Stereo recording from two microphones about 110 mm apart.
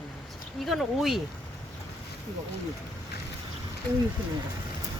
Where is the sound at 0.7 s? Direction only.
Centre (ahead or behind).